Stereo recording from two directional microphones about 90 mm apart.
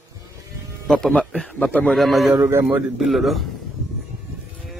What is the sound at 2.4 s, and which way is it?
Speech, 25° right (ahead or behind).